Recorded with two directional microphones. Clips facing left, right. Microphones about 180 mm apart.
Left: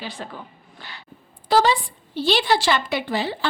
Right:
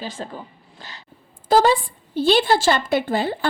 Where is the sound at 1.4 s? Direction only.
50° right (ahead or behind).